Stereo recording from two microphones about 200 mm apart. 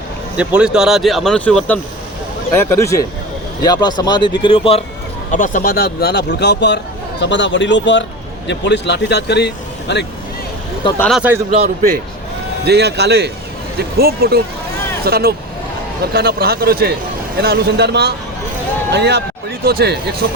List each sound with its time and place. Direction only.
0.3 s speech: 5° right (ahead or behind); by 4.8 s 25° left (ahead or behind)
5.3 s speech: 40° left (ahead or behind); by 10.1 s 55° left (ahead or behind)
10.9 s speech: 10° left (ahead or behind)
12.6 s a man's voice: 55° right (ahead or behind)